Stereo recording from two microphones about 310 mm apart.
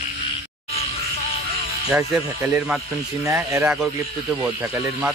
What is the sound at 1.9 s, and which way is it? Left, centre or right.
Speech, centre.